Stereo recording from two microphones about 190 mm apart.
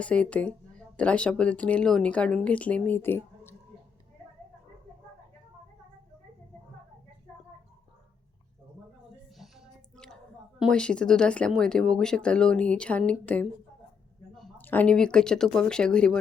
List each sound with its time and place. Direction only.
0.0 s speech: 5° left (ahead or behind)
9.4 s a sound: centre (ahead or behind)
10.6 s speech: 5° left (ahead or behind)